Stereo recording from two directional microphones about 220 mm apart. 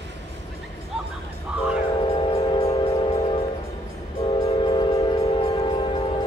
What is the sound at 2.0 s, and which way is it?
Train, 25° left (ahead or behind).